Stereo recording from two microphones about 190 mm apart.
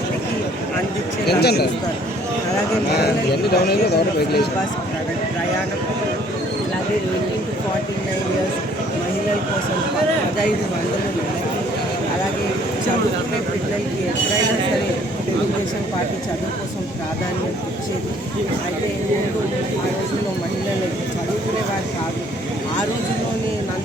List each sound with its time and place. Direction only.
1.3 s speech: 60° left (ahead or behind)
3.5 s speech: 55° left (ahead or behind)